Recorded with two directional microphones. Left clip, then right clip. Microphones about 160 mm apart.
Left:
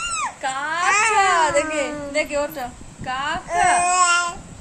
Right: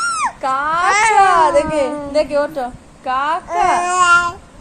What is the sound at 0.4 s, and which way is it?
Speech, 30° right (ahead or behind).